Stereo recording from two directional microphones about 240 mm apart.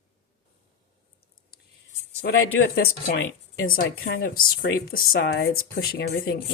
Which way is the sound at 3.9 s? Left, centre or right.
Left.